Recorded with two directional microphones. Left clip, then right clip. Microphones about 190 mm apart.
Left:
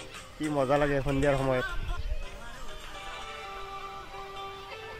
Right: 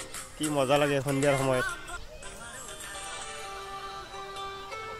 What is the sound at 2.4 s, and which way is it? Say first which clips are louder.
Music: right 2 dB; 20° right (ahead or behind).